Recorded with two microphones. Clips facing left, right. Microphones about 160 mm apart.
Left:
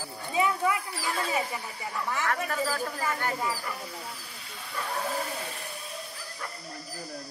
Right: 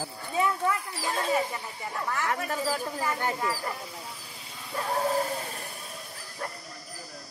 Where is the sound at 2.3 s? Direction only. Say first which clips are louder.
Even; 20° right (ahead or behind).